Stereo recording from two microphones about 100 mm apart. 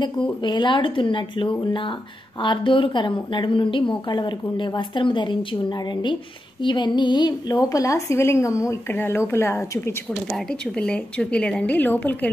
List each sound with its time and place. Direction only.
0.0 s a woman's voice: 50° left (ahead or behind)
6.6 s a woman's voice: 50° left (ahead or behind); by 9.6 s 25° left (ahead or behind)
10.8 s a woman's voice: 10° left (ahead or behind)